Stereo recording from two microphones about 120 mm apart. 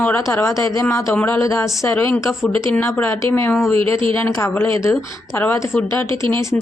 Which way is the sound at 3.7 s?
50° right (ahead or behind).